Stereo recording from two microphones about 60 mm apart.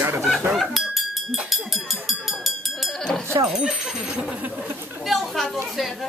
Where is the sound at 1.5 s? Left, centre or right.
Centre.